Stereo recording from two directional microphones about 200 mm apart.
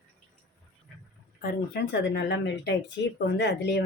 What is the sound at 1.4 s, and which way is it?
Speech, 50° left (ahead or behind).